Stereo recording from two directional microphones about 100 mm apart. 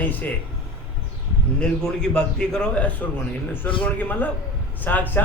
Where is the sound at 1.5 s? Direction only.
10° left (ahead or behind).